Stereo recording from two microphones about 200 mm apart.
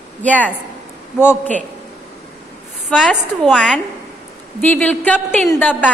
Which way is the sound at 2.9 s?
Centre (ahead or behind).